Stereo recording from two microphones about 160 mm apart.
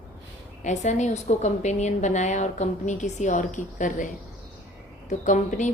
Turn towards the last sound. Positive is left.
turn(degrees=50)  # may be behind; listen again after turning